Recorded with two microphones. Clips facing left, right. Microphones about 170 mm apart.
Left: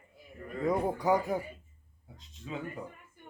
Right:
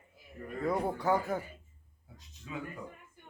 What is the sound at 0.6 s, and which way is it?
Speech, 15° left (ahead or behind).